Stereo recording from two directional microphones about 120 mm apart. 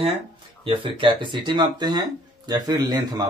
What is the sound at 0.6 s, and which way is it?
Speech, 45° right (ahead or behind).